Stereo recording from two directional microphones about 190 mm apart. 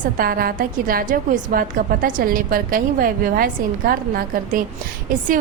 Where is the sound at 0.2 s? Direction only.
50° right (ahead or behind).